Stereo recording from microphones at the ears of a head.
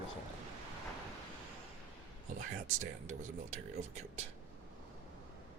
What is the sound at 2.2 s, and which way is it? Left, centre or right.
Speech, right.